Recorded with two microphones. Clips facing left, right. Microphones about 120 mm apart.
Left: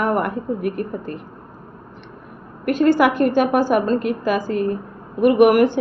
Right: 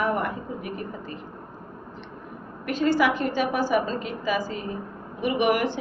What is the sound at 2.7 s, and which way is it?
A woman's voice, 50° left (ahead or behind).